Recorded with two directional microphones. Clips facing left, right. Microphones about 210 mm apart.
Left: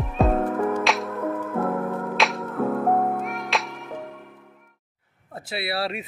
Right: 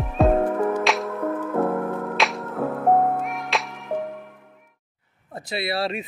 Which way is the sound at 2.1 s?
Centre (ahead or behind).